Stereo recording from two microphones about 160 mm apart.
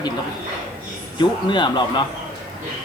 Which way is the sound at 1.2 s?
30° left (ahead or behind).